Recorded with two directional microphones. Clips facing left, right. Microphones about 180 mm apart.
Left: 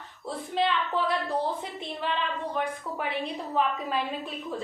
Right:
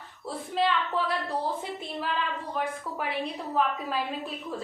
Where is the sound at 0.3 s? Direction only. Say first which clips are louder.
Even; centre (ahead or behind).